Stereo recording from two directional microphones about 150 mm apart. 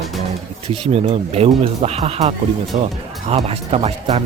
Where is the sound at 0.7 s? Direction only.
40° right (ahead or behind).